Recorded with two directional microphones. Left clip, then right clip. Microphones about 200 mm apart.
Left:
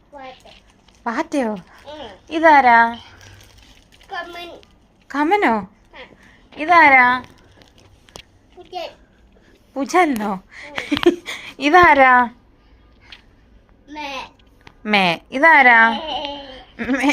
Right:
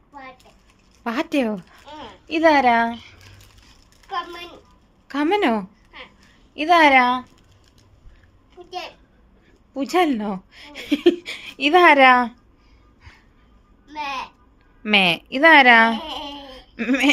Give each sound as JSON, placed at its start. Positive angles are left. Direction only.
{"t": 1.0, "sound": "a woman's voice", "side_deg": -20}
{"t": 5.0, "sound": "a woman's voice", "side_deg": -15}
{"t": 6.6, "sound": "a woman's voice", "side_deg": -30}
{"t": 9.7, "sound": "speech", "side_deg": -10}
{"t": 11.9, "sound": "a woman's voice", "side_deg": -20}
{"t": 13.8, "sound": "a sound", "side_deg": -15}
{"t": 14.8, "sound": "a woman's voice", "side_deg": -10}
{"t": 16.5, "sound": "a sound", "side_deg": -30}